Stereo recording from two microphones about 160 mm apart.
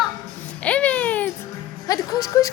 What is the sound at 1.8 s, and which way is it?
Speech, 20° left (ahead or behind).